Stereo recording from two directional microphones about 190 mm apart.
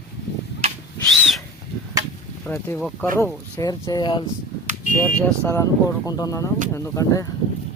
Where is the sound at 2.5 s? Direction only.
10° left (ahead or behind).